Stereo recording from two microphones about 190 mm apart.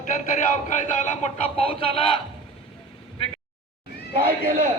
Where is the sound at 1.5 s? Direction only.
30° left (ahead or behind).